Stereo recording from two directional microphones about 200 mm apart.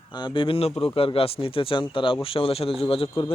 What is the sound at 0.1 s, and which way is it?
Speech, 20° left (ahead or behind).